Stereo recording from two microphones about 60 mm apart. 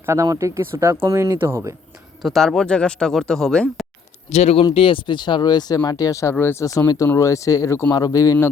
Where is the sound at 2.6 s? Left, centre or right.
Centre.